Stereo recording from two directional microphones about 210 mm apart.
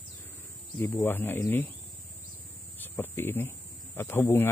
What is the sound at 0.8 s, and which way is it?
Speech, 10° left (ahead or behind).